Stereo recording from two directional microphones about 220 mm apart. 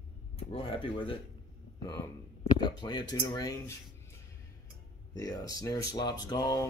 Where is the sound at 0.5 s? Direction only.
25° left (ahead or behind).